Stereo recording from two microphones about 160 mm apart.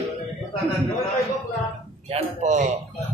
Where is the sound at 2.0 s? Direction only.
40° right (ahead or behind).